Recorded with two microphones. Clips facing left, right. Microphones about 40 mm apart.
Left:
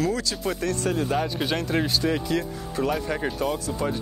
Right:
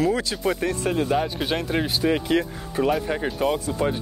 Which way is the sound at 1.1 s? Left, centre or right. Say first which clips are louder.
Right 2 dB; centre.